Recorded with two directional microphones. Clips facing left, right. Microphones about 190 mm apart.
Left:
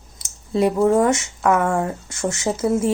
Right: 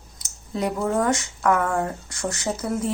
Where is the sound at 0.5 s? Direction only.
25° left (ahead or behind).